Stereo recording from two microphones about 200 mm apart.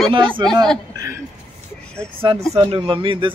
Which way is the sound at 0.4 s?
20° right (ahead or behind).